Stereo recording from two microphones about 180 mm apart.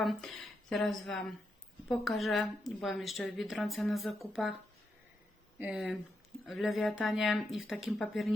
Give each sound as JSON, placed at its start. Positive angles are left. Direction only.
{"t": 0.0, "sound": "a woman's voice", "side_deg": 0}
{"t": 5.5, "sound": "a woman's voice", "side_deg": -5}